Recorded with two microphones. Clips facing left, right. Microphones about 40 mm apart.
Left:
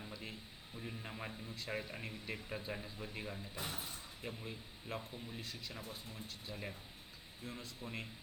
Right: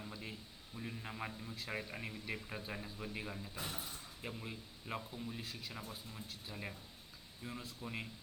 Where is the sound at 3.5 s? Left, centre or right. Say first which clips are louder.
Left 1 dB; left.